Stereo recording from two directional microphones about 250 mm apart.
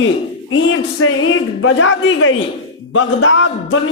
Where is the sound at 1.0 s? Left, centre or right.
Left.